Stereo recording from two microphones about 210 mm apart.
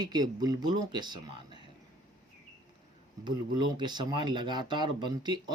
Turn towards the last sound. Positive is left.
turn(degrees=-20)  # may be behind; listen again after turning